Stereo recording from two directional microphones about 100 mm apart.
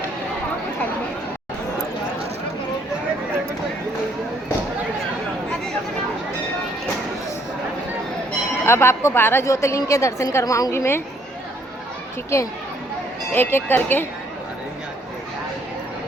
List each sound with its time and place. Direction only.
8.6 s a woman's voice: 25° left (ahead or behind)
12.3 s a woman's voice: 30° left (ahead or behind)